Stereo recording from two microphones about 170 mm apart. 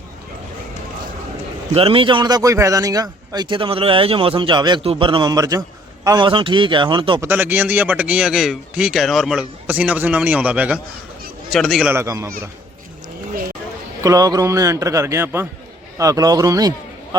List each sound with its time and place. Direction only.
1.7 s a man's voice: 35° right (ahead or behind)
7.2 s a man's voice: 10° right (ahead or behind)
11.9 s speech: 15° right (ahead or behind)
14.0 s a man's voice: 20° right (ahead or behind)